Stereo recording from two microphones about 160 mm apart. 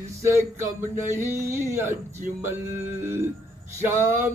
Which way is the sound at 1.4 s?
15° right (ahead or behind).